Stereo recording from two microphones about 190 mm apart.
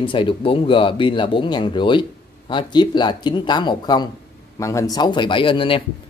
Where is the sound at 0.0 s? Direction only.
25° left (ahead or behind).